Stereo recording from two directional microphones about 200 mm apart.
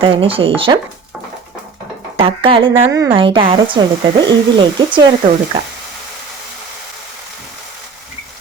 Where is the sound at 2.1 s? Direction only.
25° right (ahead or behind).